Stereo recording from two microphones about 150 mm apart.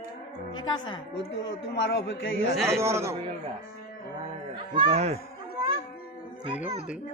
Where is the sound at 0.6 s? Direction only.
30° left (ahead or behind).